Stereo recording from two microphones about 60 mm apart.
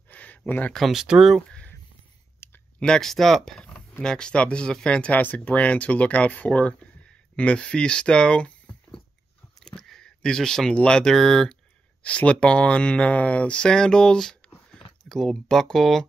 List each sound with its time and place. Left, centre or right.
0.1 s a sound: left
0.5 s speech: left
0.7 s speech: centre
1.0 s speech: centre
2.4 s clicking: left
2.8 s speech: centre
5.1 s speech: left
9.6 s a sound: centre
10.7 s speech: centre
12.0 s speech: left; by 16.1 s centre